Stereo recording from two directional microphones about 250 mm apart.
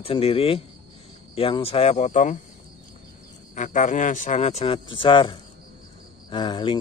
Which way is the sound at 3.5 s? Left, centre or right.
Left.